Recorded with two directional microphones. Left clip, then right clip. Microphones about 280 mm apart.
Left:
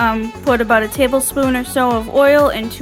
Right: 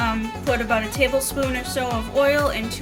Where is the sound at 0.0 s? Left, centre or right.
Centre.